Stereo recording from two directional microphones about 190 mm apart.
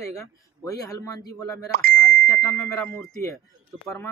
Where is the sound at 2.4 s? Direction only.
15° left (ahead or behind).